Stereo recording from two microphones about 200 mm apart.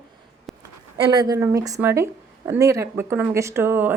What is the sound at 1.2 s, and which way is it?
Speech, 15° right (ahead or behind).